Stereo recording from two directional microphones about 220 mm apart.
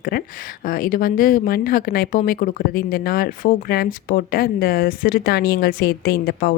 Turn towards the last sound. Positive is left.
turn(degrees=45)  # may be behind; listen again after turning